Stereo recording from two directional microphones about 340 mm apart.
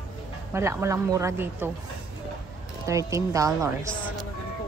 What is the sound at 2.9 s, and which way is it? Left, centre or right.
Speech, centre.